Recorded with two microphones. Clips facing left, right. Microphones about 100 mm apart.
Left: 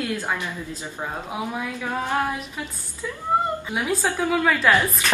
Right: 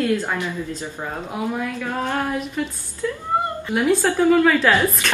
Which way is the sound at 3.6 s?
5° left (ahead or behind).